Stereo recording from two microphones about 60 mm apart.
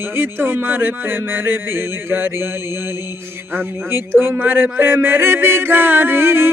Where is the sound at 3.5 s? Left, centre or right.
Right.